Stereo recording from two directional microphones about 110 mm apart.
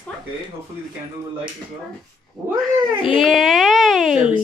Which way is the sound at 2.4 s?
Centre (ahead or behind).